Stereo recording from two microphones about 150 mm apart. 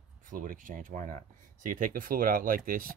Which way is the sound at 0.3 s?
65° right (ahead or behind).